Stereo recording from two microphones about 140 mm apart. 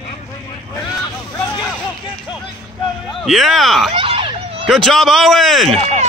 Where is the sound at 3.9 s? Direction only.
40° right (ahead or behind).